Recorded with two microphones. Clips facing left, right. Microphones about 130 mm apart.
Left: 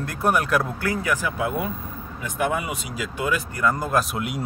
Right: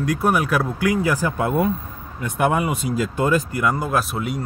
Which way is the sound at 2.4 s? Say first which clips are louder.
Right 5 dB; 55° right (ahead or behind).